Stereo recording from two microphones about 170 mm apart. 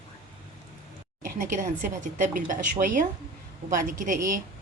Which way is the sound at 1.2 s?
50° right (ahead or behind).